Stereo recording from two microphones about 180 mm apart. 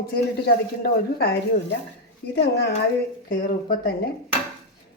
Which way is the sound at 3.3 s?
50° left (ahead or behind).